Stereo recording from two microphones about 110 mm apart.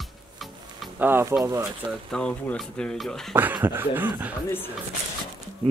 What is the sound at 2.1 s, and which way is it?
Speech, 10° left (ahead or behind).